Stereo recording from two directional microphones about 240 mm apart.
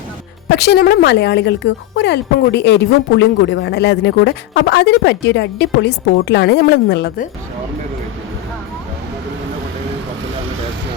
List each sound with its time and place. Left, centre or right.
0.4 s speech: left